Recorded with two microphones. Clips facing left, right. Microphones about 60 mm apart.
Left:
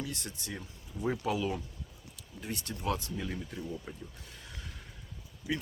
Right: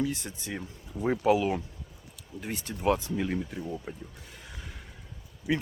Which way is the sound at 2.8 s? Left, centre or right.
Right.